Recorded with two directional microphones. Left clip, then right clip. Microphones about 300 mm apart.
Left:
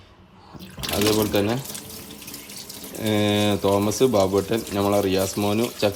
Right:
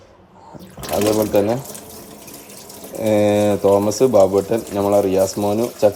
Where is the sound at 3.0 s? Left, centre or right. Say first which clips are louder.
Right 7 dB; centre.